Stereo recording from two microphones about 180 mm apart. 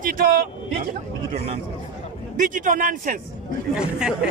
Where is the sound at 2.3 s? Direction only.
45° right (ahead or behind).